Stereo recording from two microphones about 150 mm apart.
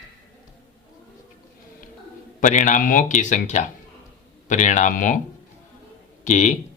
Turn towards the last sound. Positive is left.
turn(degrees=50)  # may be behind; listen again after turning